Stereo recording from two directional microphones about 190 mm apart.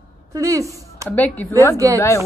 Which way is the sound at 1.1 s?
10° left (ahead or behind).